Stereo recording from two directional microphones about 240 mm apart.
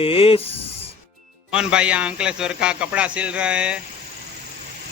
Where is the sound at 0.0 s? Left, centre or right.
Left.